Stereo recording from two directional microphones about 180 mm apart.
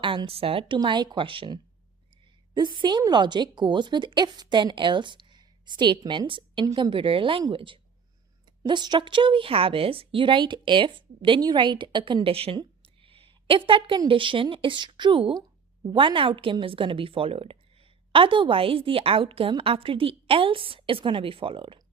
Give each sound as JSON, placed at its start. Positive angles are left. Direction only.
{"t": 0.0, "sound": "a woman's voice", "side_deg": -30}
{"t": 2.6, "sound": "a woman's voice", "side_deg": -25}